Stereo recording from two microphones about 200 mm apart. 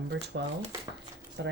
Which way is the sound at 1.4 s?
60° right (ahead or behind).